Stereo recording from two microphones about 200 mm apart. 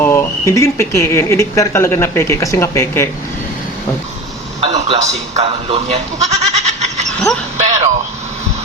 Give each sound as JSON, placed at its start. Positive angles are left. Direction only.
{"t": 0.0, "sound": "speech", "side_deg": 10}
{"t": 4.6, "sound": "speech", "side_deg": -30}
{"t": 7.6, "sound": "a sound", "side_deg": -35}